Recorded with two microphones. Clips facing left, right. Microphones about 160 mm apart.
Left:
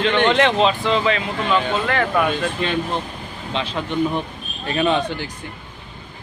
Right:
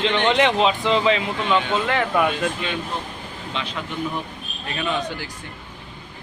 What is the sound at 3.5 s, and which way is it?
Speech, 25° left (ahead or behind).